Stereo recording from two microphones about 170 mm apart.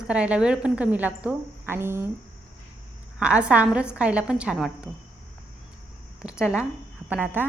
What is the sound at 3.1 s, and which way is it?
A woman's voice, 5° right (ahead or behind).